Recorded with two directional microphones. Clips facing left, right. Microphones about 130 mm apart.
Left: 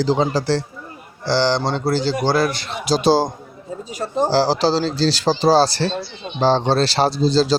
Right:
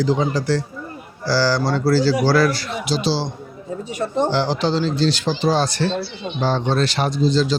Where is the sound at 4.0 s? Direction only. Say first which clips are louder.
Left 2 dB; 35° left (ahead or behind).